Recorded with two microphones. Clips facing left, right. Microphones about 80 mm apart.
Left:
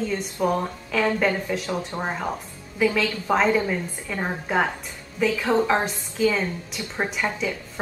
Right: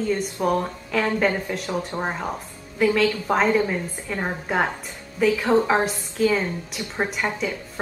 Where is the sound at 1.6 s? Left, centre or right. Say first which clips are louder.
Right 1 dB; centre.